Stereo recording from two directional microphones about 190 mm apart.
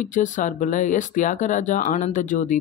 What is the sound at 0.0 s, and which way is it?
Speech, 40° left (ahead or behind).